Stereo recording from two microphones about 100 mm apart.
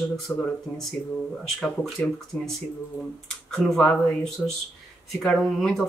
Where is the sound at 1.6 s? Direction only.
5° left (ahead or behind).